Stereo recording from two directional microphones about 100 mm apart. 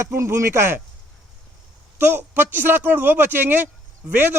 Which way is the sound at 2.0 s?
20° right (ahead or behind).